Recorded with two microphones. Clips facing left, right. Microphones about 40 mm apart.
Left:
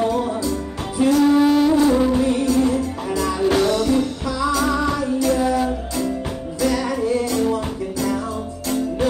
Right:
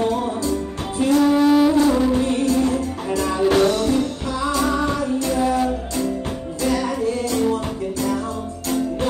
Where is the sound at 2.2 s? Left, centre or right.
Right.